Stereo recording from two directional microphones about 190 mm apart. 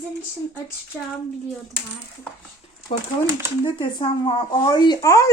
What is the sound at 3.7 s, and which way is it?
Speech, 30° left (ahead or behind).